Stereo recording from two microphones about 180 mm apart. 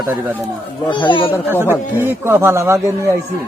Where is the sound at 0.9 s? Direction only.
25° left (ahead or behind).